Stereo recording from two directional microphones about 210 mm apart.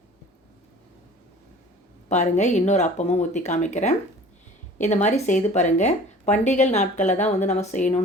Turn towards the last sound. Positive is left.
turn(degrees=35)  # may be behind; listen again after turning